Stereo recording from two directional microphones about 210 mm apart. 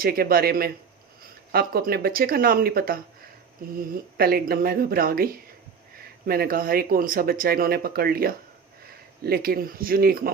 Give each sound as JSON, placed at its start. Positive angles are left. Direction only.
{"t": 0.0, "sound": "speech", "side_deg": -45}